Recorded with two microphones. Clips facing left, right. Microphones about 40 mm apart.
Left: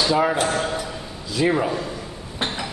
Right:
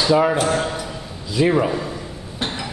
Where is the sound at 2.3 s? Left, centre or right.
Centre.